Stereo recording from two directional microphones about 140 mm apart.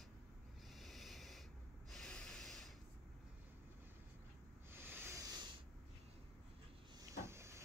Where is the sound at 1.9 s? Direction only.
5° left (ahead or behind).